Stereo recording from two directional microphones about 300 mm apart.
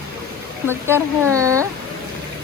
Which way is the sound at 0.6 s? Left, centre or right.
Centre.